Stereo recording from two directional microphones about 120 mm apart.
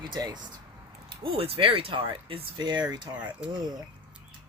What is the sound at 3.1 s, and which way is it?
Speech, 10° right (ahead or behind).